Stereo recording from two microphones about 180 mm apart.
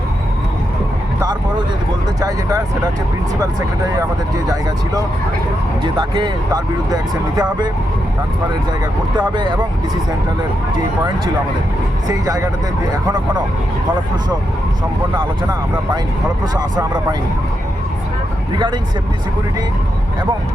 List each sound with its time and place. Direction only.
2.2 s speech: 20° right (ahead or behind)
5.8 s speech: 25° right (ahead or behind)
9.1 s speech: 25° right (ahead or behind)
12.0 s speech: 20° right (ahead or behind)
16.6 s speech: 25° right (ahead or behind)